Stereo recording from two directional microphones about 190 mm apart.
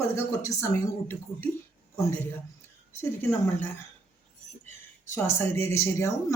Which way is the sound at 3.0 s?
10° left (ahead or behind).